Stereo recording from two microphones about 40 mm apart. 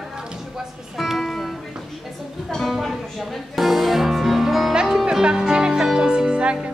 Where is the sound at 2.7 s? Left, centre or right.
Centre.